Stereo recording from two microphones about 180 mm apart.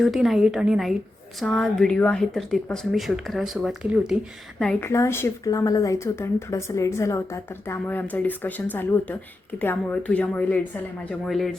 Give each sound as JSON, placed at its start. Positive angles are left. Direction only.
{"t": 0.0, "sound": "speech", "side_deg": 0}
{"t": 4.9, "sound": "speech", "side_deg": 15}